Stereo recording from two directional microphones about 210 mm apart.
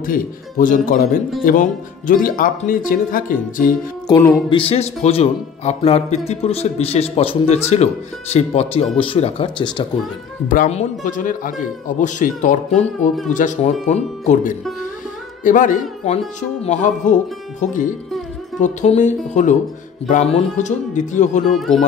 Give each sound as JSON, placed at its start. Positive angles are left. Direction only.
{"t": 0.0, "sound": "speech", "side_deg": 40}
{"t": 4.5, "sound": "speech", "side_deg": 25}
{"t": 10.5, "sound": "speech", "side_deg": 35}
{"t": 21.5, "sound": "speech", "side_deg": 0}